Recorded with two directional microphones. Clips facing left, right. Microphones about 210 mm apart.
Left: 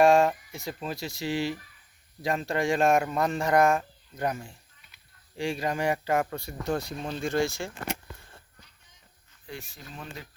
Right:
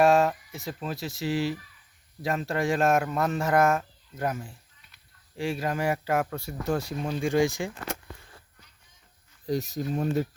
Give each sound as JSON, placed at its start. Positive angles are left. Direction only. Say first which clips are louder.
{"t": 0.0, "sound": "speech", "louder": "left 1 dB", "side_deg": -5}
{"t": 9.5, "sound": "speech", "louder": "right 14 dB", "side_deg": -40}